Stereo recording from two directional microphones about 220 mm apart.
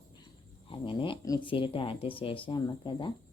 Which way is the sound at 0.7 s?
20° left (ahead or behind).